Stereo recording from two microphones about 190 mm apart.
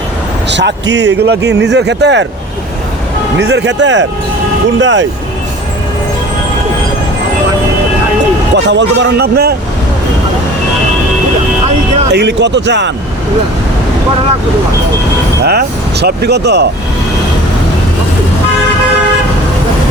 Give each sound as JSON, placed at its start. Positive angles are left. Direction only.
{"t": 0.5, "sound": "speech", "side_deg": -70}
{"t": 3.3, "sound": "speech", "side_deg": -65}
{"t": 8.5, "sound": "speech", "side_deg": -70}
{"t": 12.1, "sound": "speech", "side_deg": -65}
{"t": 15.4, "sound": "speech", "side_deg": -60}